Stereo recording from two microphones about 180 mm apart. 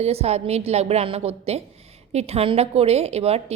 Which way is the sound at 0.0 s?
35° right (ahead or behind).